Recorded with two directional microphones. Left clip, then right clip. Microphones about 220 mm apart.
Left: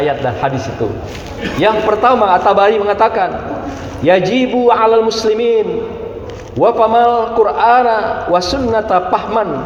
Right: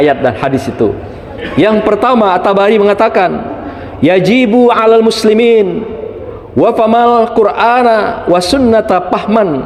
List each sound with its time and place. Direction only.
0.0 s a man's voice: 60° right (ahead or behind)